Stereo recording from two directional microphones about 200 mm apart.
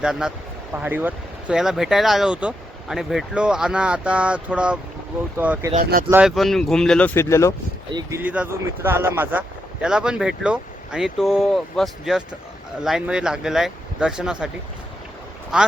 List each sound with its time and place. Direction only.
0.0 s speech: 5° right (ahead or behind)
5.8 s speech: 45° right (ahead or behind)
6.1 s speech: 5° right (ahead or behind); by 7.5 s 15° left (ahead or behind)
7.9 s speech: 10° right (ahead or behind)